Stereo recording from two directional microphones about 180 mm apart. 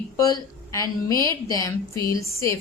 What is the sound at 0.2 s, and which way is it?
A woman's voice, 20° left (ahead or behind).